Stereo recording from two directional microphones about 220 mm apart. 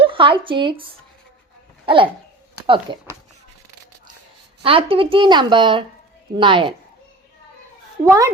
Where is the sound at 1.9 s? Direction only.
25° right (ahead or behind).